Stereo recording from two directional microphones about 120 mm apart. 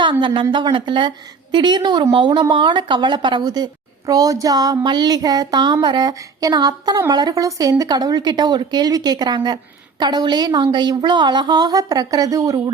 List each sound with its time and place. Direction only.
0.0 s a woman's voice: 45° right (ahead or behind)